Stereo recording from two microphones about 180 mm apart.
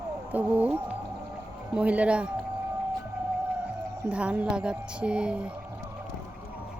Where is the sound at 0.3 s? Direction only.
10° right (ahead or behind).